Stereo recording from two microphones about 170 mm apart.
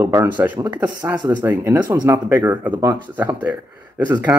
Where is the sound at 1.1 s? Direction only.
25° right (ahead or behind).